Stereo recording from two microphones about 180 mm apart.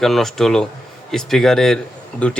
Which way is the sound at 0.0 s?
Centre (ahead or behind).